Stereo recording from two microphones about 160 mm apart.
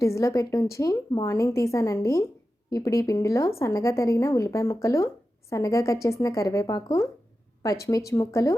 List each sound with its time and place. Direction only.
0.0 s a woman's voice: 20° left (ahead or behind)